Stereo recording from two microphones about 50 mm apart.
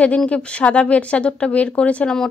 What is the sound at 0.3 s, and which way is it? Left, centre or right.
Speech, left.